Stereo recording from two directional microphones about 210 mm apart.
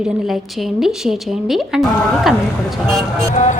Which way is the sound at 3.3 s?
35° left (ahead or behind).